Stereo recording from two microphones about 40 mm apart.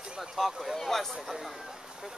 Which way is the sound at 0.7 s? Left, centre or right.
Centre.